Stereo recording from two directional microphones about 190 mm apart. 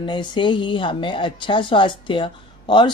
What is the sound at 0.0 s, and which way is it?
Speech, 25° left (ahead or behind).